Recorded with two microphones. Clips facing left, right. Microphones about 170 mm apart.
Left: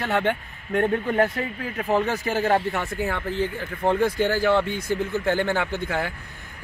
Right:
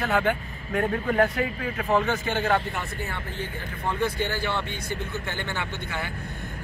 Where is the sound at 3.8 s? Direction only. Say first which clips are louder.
Left 6 dB; 75° left (ahead or behind).